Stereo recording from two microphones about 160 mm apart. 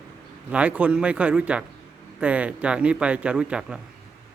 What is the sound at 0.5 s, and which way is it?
A man's voice, 5° right (ahead or behind).